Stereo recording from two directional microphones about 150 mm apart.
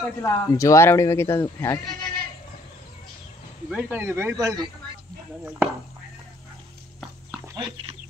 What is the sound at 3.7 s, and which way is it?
Speech, 10° right (ahead or behind).